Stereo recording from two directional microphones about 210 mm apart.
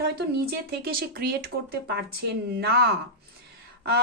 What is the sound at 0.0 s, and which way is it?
Speech, 50° right (ahead or behind).